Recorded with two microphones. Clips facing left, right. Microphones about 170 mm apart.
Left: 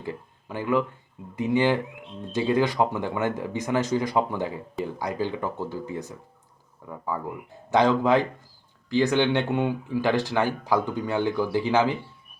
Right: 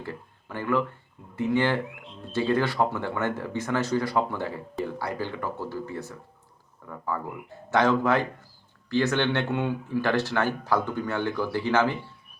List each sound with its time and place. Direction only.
0.0 s speech: 15° left (ahead or behind)